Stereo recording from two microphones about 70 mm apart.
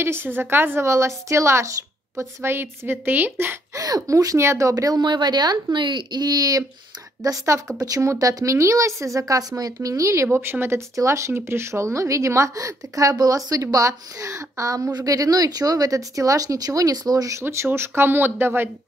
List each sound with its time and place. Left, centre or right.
0.0 s a woman's voice: right
3.7 s speech: right
4.4 s a woman's voice: right
7.2 s a woman's voice: right
7.7 s speech: right
8.0 s a woman's voice: right
11.0 s a woman's voice: right
17.4 s a woman's voice: right